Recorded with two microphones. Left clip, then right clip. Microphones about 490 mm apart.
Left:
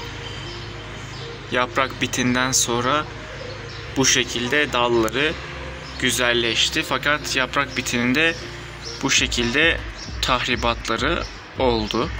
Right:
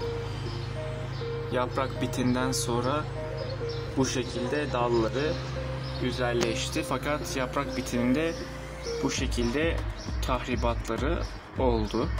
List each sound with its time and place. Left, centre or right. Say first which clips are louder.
1.5 s speech: left 9 dB; right